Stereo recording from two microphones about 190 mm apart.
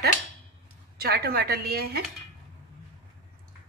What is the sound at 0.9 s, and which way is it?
Speech, 55° right (ahead or behind).